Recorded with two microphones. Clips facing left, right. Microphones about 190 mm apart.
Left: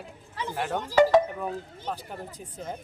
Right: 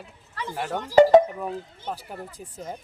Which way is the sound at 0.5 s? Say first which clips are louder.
Right 4 dB; 5° left (ahead or behind).